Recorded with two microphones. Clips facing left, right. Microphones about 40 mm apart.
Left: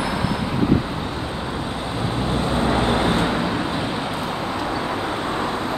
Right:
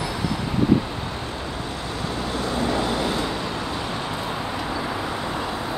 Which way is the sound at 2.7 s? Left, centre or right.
Left.